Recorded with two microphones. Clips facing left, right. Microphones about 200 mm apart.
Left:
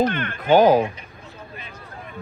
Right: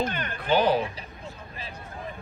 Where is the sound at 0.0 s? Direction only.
45° left (ahead or behind).